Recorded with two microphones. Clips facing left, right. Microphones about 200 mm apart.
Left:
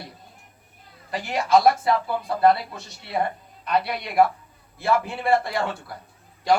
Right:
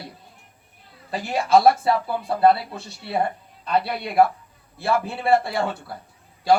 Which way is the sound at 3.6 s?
30° right (ahead or behind).